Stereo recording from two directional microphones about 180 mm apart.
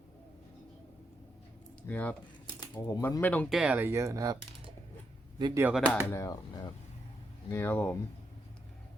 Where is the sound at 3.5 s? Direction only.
5° right (ahead or behind).